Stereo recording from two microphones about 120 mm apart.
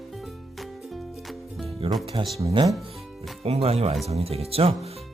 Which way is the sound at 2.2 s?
45° right (ahead or behind).